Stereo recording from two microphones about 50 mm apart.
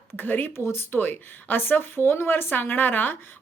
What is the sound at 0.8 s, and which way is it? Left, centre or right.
A woman's voice, left.